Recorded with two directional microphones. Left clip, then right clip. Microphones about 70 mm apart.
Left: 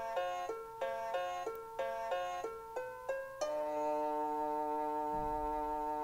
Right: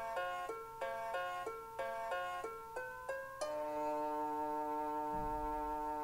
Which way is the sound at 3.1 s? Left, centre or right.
Right.